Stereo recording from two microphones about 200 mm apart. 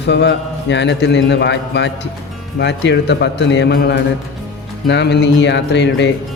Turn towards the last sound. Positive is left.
turn(degrees=60)  # may be behind; listen again after turning